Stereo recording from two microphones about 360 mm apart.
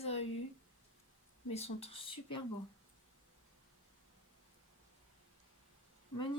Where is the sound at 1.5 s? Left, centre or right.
Centre.